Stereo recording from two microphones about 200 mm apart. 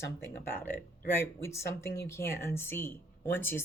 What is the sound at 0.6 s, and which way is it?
Speech, 10° left (ahead or behind).